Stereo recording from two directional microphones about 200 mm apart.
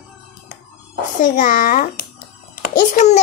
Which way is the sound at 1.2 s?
40° left (ahead or behind).